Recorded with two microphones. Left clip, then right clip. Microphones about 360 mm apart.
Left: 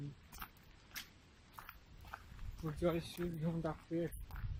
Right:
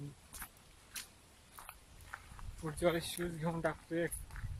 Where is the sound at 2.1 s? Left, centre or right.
Centre.